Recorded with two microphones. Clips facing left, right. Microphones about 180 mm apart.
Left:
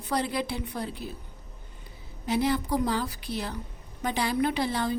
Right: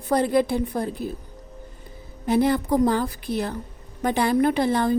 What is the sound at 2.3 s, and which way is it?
A woman's voice, 50° right (ahead or behind).